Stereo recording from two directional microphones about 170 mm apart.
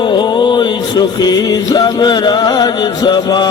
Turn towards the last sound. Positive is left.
turn(degrees=25)  # may be behind; listen again after turning